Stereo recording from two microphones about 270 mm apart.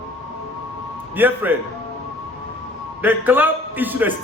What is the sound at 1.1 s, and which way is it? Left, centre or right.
Speech, centre.